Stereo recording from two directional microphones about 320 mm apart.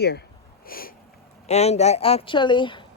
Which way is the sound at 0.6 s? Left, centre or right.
Left.